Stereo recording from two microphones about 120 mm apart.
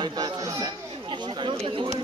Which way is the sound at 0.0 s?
35° right (ahead or behind).